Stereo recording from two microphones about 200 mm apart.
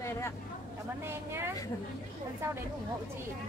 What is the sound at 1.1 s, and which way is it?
Speech, 10° right (ahead or behind).